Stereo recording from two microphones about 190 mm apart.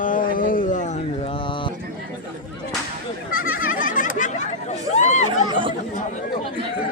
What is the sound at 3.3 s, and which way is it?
Goat, 50° left (ahead or behind).